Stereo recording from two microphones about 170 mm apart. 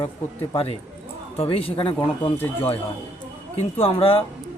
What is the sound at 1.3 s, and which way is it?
Speech, 35° left (ahead or behind).